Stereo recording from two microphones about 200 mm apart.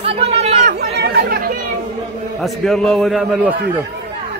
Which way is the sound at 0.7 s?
50° right (ahead or behind).